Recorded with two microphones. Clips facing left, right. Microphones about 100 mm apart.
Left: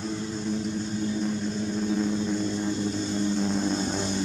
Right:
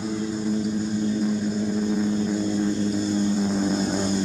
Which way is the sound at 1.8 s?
5° right (ahead or behind).